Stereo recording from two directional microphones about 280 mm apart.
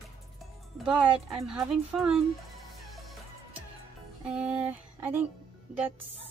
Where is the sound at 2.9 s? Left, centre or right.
Centre.